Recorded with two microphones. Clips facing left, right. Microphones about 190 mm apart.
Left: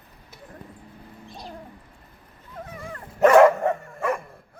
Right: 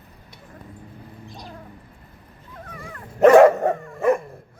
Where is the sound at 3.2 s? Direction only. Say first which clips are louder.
Right 3 dB; 30° right (ahead or behind).